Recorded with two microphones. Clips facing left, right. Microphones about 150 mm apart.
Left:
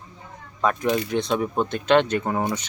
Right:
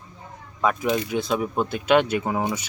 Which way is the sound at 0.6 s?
5° right (ahead or behind).